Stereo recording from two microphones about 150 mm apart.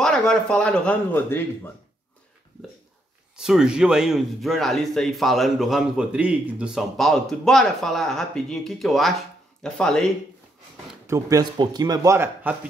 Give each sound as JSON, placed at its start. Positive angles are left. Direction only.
{"t": 0.0, "sound": "a man's voice", "side_deg": 5}
{"t": 3.3, "sound": "a man's voice", "side_deg": -5}
{"t": 11.1, "sound": "speech", "side_deg": -20}